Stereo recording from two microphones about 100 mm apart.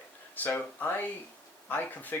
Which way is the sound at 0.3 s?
15° left (ahead or behind).